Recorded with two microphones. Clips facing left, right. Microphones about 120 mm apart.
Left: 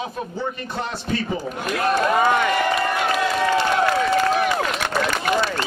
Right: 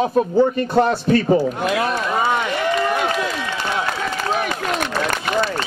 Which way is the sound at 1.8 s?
50° left (ahead or behind).